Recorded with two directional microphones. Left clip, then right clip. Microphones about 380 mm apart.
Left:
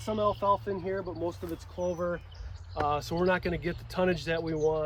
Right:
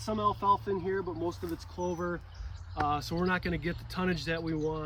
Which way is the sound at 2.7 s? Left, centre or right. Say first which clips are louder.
Left 2 dB; centre.